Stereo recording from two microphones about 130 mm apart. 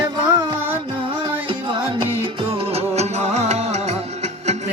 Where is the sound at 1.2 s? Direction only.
40° right (ahead or behind).